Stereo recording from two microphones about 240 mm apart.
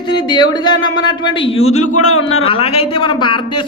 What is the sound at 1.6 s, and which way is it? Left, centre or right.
Speech, left.